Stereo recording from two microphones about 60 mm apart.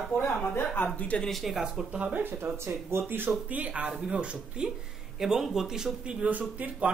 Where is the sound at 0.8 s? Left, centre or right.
Left.